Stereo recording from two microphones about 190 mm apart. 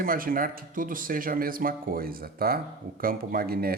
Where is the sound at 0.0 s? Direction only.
50° right (ahead or behind).